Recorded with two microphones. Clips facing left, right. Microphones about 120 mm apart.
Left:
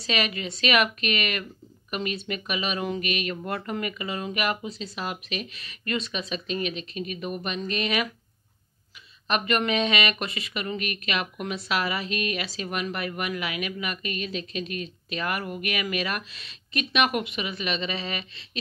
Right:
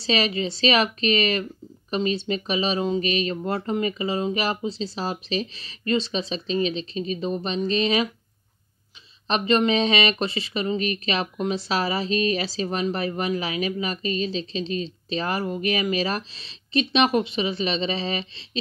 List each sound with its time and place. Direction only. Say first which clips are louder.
0.0 s speech: right 5 dB; 30° right (ahead or behind)
9.3 s speech: right 4 dB; 30° right (ahead or behind)